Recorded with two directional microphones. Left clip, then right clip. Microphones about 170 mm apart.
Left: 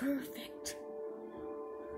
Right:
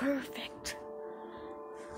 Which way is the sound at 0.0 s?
20° right (ahead or behind).